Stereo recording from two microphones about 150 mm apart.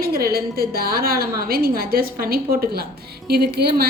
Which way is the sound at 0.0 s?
85° right.